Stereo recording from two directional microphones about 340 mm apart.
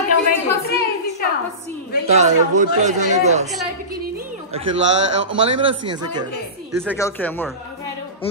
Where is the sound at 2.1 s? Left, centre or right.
Right.